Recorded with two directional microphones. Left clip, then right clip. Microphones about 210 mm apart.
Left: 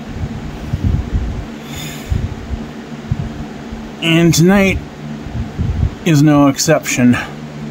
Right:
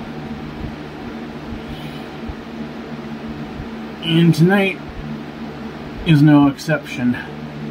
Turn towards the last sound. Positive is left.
turn(degrees=55)  # may be behind; listen again after turning